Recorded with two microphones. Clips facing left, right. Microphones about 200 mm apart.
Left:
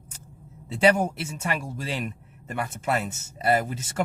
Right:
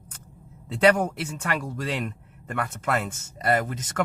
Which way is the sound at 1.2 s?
25° left (ahead or behind).